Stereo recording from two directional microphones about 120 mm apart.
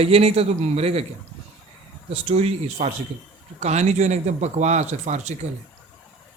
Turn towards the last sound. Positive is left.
turn(degrees=-70)  # may be behind; listen again after turning